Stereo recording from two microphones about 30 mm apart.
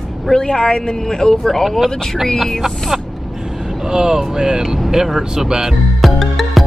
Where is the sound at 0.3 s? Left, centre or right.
Left.